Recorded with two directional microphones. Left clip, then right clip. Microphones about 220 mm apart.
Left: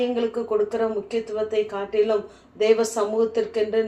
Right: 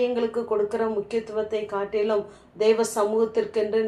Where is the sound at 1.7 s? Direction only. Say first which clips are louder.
Left 3 dB; 40° right (ahead or behind).